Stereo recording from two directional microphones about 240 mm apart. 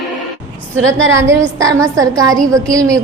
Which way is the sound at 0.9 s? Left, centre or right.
Right.